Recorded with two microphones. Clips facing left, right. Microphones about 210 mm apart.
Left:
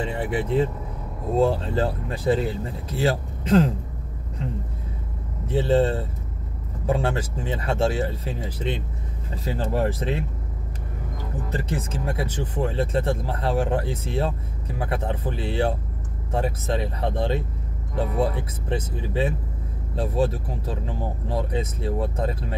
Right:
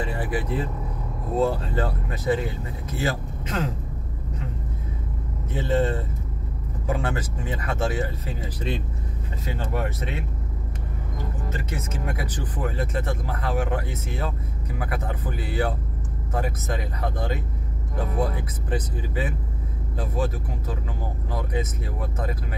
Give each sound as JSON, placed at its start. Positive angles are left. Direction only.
{"t": 0.0, "sound": "speech", "side_deg": 25}
{"t": 5.5, "sound": "speech", "side_deg": 30}
{"t": 11.4, "sound": "speech", "side_deg": 35}